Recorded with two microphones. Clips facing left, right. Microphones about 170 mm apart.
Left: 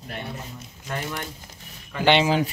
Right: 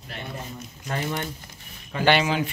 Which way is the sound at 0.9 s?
25° right (ahead or behind).